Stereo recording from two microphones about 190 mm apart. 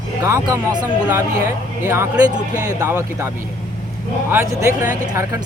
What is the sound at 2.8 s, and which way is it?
Speech, 15° right (ahead or behind).